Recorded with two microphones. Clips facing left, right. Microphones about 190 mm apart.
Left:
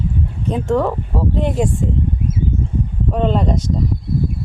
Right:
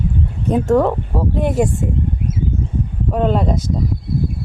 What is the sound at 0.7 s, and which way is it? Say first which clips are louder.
Speech: right 2 dB; 15° right (ahead or behind).